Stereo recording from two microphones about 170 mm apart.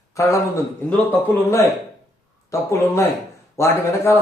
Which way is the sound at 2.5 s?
15° left (ahead or behind).